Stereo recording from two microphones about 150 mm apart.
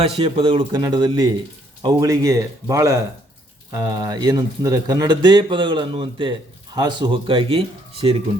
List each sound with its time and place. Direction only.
0.2 s speech: 40° right (ahead or behind)